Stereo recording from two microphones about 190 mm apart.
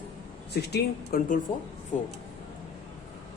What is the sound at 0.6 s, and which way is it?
Speech, 60° left (ahead or behind).